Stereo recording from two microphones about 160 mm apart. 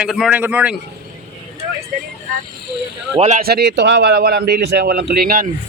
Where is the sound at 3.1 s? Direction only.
45° right (ahead or behind).